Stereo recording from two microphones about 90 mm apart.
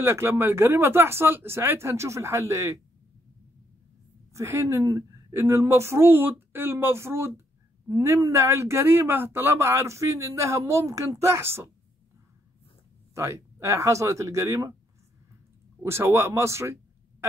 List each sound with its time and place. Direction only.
0.0 s speech: 30° right (ahead or behind)
4.3 s speech: 35° right (ahead or behind)
13.1 s speech: 30° right (ahead or behind)
15.8 s speech: 30° right (ahead or behind)